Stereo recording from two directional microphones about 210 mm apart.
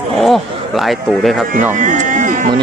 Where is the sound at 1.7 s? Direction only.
35° right (ahead or behind).